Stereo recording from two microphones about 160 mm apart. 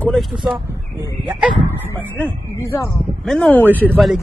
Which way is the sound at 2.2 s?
10° left (ahead or behind).